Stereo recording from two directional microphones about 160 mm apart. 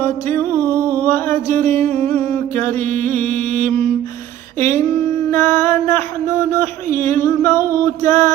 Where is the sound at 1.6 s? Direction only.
10° left (ahead or behind).